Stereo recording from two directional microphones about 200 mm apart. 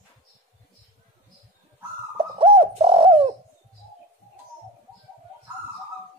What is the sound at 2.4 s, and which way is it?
Bird, 30° right (ahead or behind).